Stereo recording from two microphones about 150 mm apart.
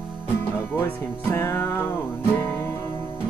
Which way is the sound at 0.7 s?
15° left (ahead or behind).